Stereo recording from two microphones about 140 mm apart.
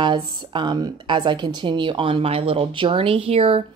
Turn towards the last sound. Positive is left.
turn(degrees=-45)  # may be behind; listen again after turning